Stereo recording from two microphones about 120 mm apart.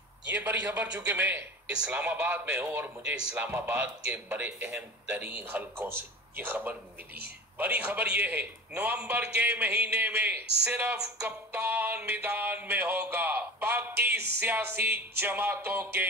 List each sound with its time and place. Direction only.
0.3 s a man's voice: 15° right (ahead or behind)